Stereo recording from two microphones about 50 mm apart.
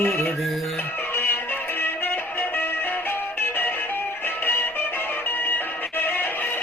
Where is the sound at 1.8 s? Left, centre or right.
Left.